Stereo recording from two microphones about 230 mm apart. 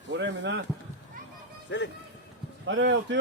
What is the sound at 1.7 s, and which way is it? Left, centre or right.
Speech, left.